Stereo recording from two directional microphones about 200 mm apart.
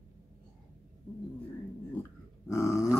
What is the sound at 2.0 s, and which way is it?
Grunt, 15° left (ahead or behind).